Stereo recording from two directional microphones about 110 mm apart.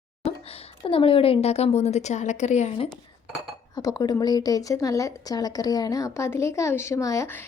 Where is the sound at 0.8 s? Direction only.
55° left (ahead or behind); by 2.7 s 90° left.